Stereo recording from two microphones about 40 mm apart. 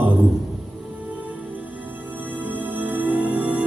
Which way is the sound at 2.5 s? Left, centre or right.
Right.